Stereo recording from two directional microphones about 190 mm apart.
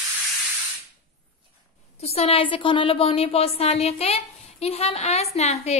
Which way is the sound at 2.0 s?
35° left (ahead or behind).